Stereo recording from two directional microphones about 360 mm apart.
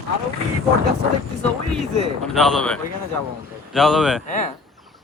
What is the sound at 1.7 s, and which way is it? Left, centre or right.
Speech, centre.